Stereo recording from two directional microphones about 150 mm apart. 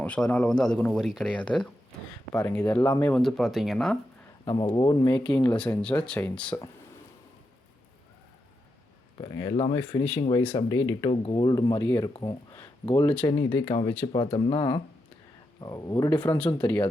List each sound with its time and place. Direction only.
0.0 s speech: 10° left (ahead or behind)
4.4 s speech: 30° left (ahead or behind)
5.0 s speech: 5° left (ahead or behind)
9.2 s speech: 30° left (ahead or behind)
11.1 s speech: 35° left (ahead or behind)
11.8 s speech: 20° left (ahead or behind)
12.1 s speech: 30° left (ahead or behind)
16.2 s speech: 10° left (ahead or behind)